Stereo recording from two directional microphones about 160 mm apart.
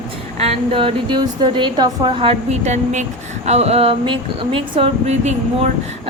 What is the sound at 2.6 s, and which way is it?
A woman's voice, 45° right (ahead or behind).